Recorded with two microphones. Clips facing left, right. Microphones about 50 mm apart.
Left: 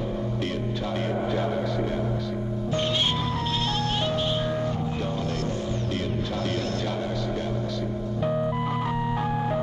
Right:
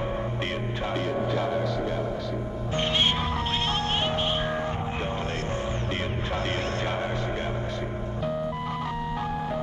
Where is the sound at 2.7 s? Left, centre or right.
Right.